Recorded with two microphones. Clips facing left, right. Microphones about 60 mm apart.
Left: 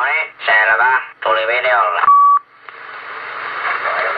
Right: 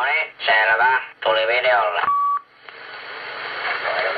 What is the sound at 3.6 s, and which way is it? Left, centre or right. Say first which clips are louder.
Radio: left 5 dB; left.